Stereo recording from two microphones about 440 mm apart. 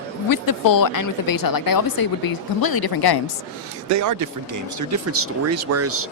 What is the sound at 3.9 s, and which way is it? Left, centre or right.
Speech, right.